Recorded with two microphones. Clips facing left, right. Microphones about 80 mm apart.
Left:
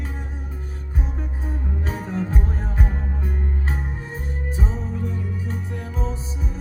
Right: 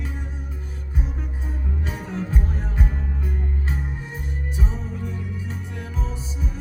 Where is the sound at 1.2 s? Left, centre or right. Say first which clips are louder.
Left 3 dB; left.